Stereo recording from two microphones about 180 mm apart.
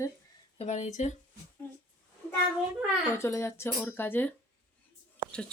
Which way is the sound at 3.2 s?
15° left (ahead or behind).